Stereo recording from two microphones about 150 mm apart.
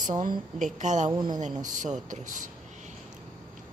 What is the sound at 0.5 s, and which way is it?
Speech, 55° right (ahead or behind).